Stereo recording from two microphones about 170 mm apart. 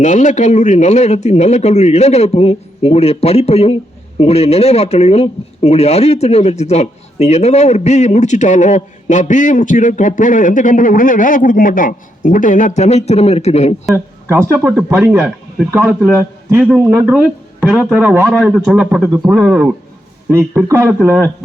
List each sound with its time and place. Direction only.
0.0 s speech: 45° left (ahead or behind)
13.9 s speech: 15° right (ahead or behind)